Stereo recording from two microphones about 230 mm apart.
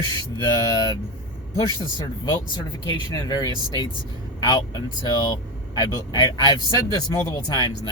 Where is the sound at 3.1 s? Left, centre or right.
Centre.